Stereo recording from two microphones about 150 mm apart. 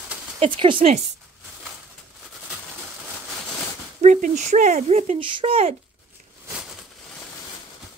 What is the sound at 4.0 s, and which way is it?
Speech, 55° right (ahead or behind).